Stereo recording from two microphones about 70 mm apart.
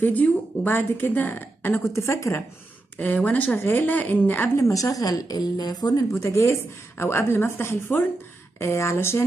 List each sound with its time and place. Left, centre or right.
0.0 s speech: left
2.0 s a woman's voice: left
3.3 s speech: left
4.6 s a woman's voice: left
6.1 s a woman's voice: left